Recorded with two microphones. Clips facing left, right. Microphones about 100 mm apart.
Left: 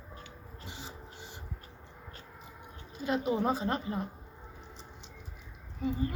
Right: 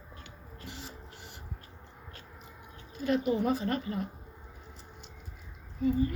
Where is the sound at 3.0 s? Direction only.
20° left (ahead or behind).